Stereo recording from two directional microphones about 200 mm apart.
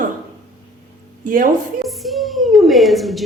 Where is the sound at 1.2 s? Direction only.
45° right (ahead or behind).